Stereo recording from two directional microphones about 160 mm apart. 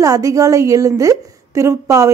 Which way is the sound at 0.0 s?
20° right (ahead or behind).